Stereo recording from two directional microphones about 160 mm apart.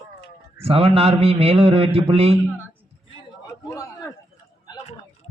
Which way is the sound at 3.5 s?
20° left (ahead or behind).